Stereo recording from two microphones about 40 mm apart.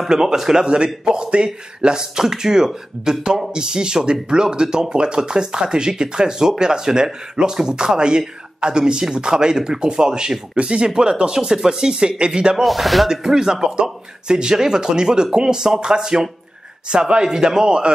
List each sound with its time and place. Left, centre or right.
0.1 s speech: centre
12.6 s speech: centre
13.1 s speech: centre